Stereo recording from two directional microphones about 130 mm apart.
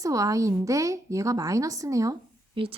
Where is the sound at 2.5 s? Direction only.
45° right (ahead or behind).